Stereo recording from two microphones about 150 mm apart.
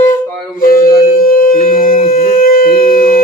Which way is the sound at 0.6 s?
75° left (ahead or behind).